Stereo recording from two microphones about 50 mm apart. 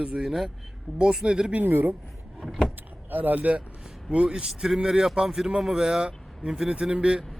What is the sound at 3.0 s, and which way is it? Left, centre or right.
Speech, right.